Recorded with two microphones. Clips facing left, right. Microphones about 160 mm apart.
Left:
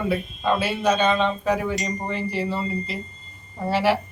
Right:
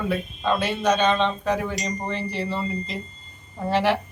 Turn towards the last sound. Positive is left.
turn(degrees=5)  # may be behind; listen again after turning